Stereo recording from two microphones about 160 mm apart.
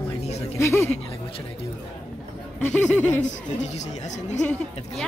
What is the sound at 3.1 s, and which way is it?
Speech, 45° left (ahead or behind).